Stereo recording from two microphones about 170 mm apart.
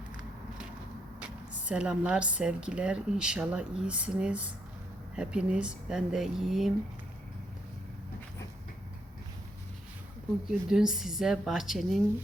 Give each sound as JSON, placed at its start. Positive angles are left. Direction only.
{"t": 1.2, "sound": "a woman's voice", "side_deg": -5}
{"t": 10.4, "sound": "a woman's voice", "side_deg": -5}